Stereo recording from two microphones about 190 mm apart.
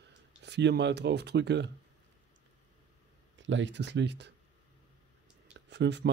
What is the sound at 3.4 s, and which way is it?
Speech, 75° right (ahead or behind).